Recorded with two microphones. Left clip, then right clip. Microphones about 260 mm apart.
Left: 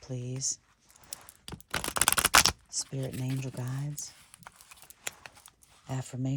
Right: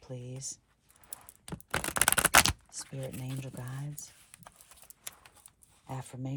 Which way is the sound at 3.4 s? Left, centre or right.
Left.